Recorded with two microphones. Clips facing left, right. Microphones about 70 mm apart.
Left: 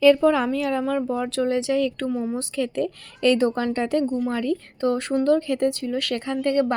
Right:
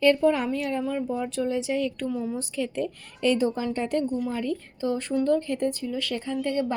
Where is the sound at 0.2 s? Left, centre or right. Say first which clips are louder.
Left 3 dB; left.